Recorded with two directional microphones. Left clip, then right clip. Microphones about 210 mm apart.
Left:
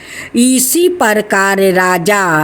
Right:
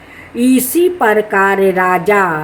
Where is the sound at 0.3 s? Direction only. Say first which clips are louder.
Left 1 dB; 50° left (ahead or behind).